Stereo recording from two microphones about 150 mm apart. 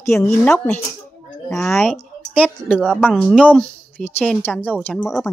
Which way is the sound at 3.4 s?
10° left (ahead or behind).